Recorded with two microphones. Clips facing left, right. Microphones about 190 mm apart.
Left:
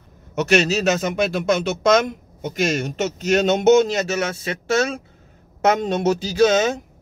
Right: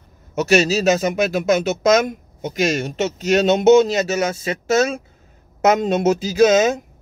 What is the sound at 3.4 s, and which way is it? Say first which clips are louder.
Speech: right 3 dB; 35° right (ahead or behind).